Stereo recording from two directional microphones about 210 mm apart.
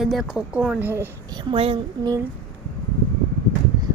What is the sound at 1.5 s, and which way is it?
Speech, 25° right (ahead or behind).